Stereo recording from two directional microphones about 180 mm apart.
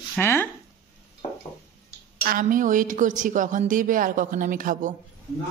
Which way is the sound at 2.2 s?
50° right (ahead or behind).